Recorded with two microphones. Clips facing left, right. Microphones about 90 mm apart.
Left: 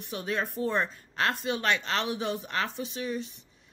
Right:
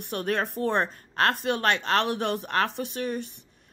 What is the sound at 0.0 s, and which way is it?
Speech, 55° right (ahead or behind).